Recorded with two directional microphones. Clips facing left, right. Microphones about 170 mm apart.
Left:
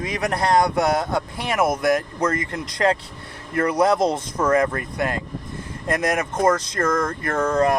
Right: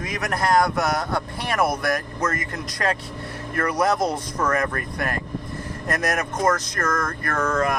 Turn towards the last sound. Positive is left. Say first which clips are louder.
# left 4 dB
turn(degrees=30)  # may be behind; listen again after turning